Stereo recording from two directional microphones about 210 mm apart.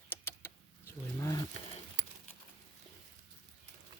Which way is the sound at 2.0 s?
35° right (ahead or behind).